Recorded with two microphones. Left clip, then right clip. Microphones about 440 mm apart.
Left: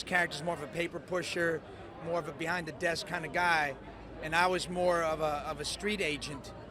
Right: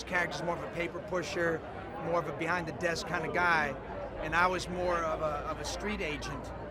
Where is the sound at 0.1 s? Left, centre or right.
Left.